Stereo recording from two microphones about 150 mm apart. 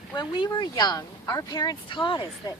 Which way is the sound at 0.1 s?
30° left (ahead or behind).